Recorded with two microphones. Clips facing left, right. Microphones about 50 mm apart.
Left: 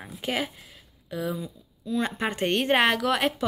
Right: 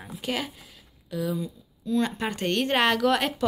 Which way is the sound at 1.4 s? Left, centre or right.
Centre.